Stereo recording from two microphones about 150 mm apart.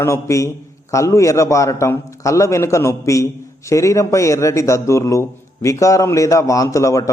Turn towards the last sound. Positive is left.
turn(degrees=20)  # may be behind; listen again after turning